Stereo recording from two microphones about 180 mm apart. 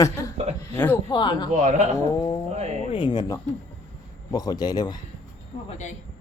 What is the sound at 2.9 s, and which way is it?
A child's voice, 25° left (ahead or behind).